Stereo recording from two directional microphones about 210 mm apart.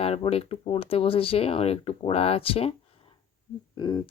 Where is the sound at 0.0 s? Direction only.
25° left (ahead or behind).